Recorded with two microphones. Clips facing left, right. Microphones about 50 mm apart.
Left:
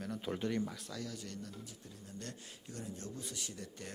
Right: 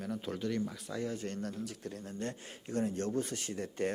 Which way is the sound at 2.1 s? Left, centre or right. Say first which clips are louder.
Right 8 dB; right.